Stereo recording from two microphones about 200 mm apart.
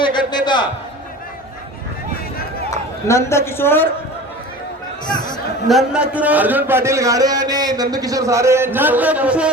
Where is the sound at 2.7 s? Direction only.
15° left (ahead or behind).